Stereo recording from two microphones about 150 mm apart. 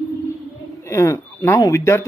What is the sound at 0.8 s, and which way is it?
Speech, 20° left (ahead or behind).